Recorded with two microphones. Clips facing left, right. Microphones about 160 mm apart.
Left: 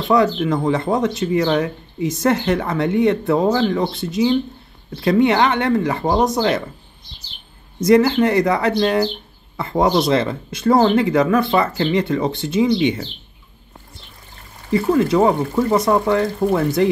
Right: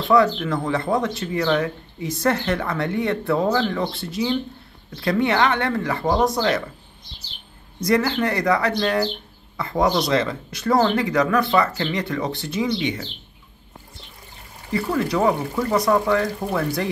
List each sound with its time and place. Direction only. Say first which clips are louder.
0.1 s speech: left 2 dB; 20° left (ahead or behind)
7.8 s speech: left 7 dB; 20° left (ahead or behind)
14.7 s speech: left 6 dB; 20° left (ahead or behind)